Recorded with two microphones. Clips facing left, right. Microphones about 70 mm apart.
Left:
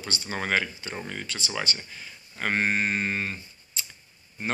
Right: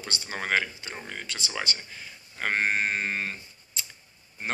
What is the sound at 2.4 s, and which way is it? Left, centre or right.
Mantra, right.